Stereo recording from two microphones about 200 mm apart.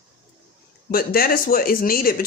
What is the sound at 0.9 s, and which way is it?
Speech, 50° left (ahead or behind).